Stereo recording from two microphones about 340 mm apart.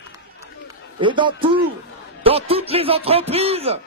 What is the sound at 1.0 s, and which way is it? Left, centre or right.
Speech, centre.